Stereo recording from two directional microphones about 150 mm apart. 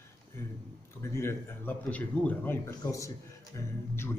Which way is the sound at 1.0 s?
15° left (ahead or behind).